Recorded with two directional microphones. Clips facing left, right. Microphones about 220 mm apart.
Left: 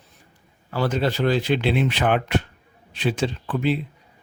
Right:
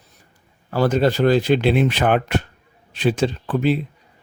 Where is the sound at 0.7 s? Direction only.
45° right (ahead or behind).